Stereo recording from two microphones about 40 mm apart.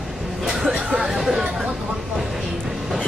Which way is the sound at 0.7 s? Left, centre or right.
Right.